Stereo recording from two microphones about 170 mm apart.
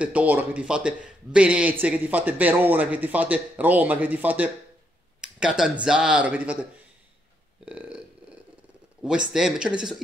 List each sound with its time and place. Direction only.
0.0 s a man's voice: 10° right (ahead or behind)
7.6 s a sound: 10° right (ahead or behind)
9.3 s speech: 5° right (ahead or behind)